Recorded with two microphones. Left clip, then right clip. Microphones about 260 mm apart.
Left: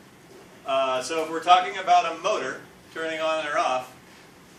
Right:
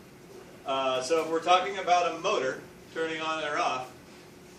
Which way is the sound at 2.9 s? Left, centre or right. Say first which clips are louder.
Left 5 dB; centre.